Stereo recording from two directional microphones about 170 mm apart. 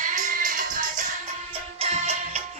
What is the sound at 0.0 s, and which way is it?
Music, 50° right (ahead or behind).